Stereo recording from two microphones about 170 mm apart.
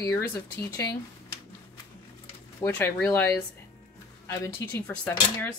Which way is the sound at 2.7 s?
10° left (ahead or behind).